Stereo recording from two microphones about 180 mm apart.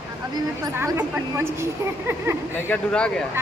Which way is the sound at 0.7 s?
10° right (ahead or behind).